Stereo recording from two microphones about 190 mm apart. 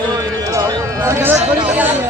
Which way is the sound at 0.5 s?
15° right (ahead or behind).